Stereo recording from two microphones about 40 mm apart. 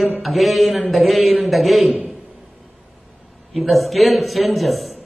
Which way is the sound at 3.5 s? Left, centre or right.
Centre.